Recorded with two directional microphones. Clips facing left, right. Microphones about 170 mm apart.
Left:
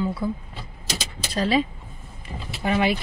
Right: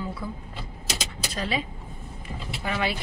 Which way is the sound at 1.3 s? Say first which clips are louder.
Left 8 dB; 35° left (ahead or behind).